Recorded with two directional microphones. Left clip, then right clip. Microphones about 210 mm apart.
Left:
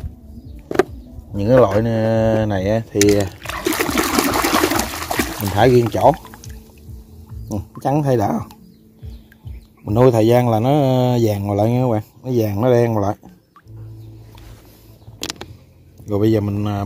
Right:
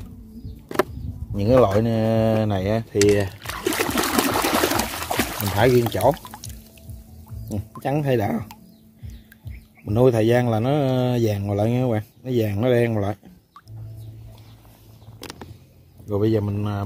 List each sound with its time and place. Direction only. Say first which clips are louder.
1.3 s a sound: left 4 dB; centre (ahead or behind)
5.7 s speech: left 4 dB; 10° right (ahead or behind)
6.1 s pour: left 2 dB; 10° right (ahead or behind)
7.8 s speech: left 5 dB; 10° left (ahead or behind)
9.8 s speech: left 4 dB; 15° left (ahead or behind)
16.1 s a man's voice: left 4 dB; 20° left (ahead or behind)